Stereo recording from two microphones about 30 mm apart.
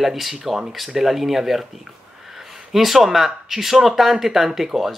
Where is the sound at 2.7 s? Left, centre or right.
Centre.